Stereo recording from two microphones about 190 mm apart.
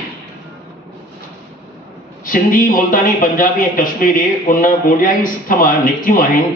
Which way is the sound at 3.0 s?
45° left (ahead or behind).